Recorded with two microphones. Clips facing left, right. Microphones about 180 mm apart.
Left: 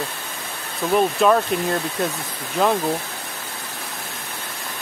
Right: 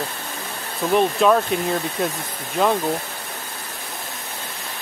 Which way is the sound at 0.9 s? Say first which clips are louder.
Even; centre (ahead or behind).